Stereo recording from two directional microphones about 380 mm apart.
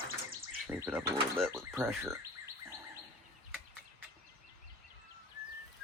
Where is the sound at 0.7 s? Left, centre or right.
Centre.